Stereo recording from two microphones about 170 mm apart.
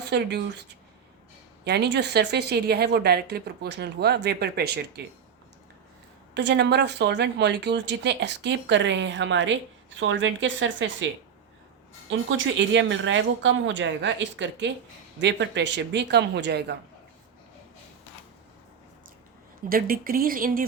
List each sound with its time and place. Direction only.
0.0 s speech: 85° right
1.6 s a woman's voice: 75° right (ahead or behind)
6.3 s speech: 90° right
12.5 s speech: 90° right
19.6 s speech: 60° right (ahead or behind)